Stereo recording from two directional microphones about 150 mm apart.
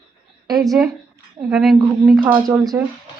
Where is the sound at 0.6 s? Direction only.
Centre (ahead or behind).